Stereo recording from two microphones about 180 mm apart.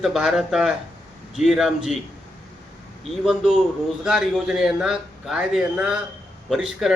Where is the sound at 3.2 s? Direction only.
5° right (ahead or behind).